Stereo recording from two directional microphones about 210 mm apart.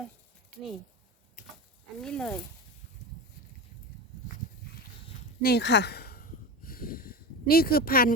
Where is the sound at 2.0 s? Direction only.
5° left (ahead or behind).